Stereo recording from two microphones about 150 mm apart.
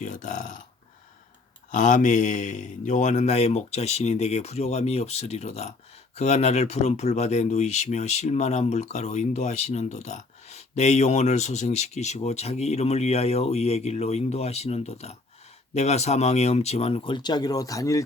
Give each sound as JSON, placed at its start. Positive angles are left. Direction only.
{"t": 0.0, "sound": "burping", "side_deg": 55}
{"t": 1.7, "sound": "speech", "side_deg": 55}